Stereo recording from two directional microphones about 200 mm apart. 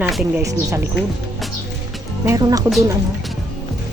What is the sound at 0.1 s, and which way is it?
Speech, centre (ahead or behind).